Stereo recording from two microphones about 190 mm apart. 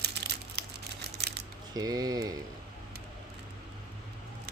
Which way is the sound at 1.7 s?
20° right (ahead or behind).